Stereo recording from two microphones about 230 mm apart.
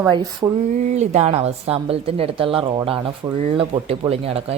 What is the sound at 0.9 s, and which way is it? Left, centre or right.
A woman's voice, right.